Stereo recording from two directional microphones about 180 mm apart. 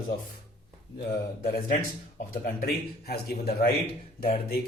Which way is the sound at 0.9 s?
65° left (ahead or behind).